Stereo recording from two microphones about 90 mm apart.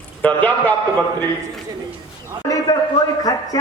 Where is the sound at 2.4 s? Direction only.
40° left (ahead or behind).